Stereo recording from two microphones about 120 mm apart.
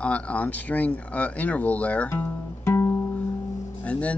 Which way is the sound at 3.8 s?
10° left (ahead or behind).